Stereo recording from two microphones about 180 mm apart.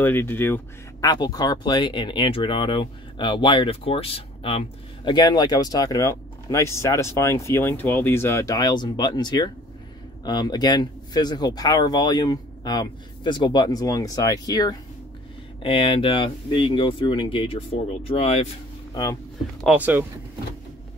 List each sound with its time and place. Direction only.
0.0 s speech: 10° left (ahead or behind); by 18.5 s 35° left (ahead or behind)
19.6 s speech: 10° right (ahead or behind)